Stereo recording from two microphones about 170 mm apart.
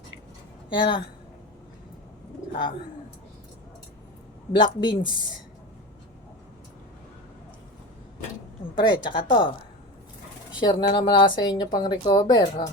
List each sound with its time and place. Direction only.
0.7 s speech: 30° left (ahead or behind)
4.5 s speech: 25° left (ahead or behind)
8.7 s speech: 25° left (ahead or behind)
10.6 s speech: 25° left (ahead or behind)